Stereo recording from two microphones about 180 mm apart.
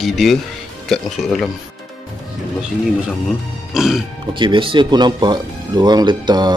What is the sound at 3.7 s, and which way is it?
Speech, centre (ahead or behind).